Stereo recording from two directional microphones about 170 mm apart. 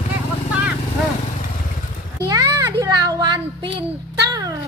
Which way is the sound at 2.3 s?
20° right (ahead or behind).